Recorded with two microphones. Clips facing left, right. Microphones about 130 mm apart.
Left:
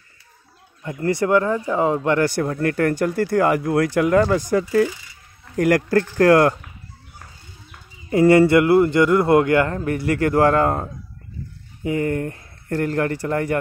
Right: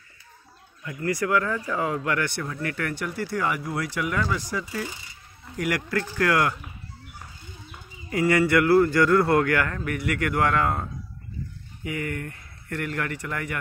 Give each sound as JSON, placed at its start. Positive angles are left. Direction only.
{"t": 0.8, "sound": "a man's voice", "side_deg": 30}
{"t": 2.2, "sound": "speech", "side_deg": 45}
{"t": 8.1, "sound": "a man's voice", "side_deg": 30}